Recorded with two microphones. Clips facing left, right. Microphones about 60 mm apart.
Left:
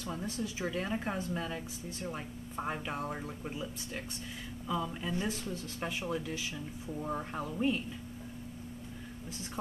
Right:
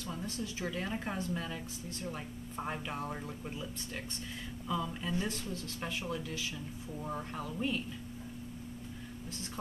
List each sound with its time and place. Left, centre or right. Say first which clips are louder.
0.0 s a woman's voice: left 2 dB; centre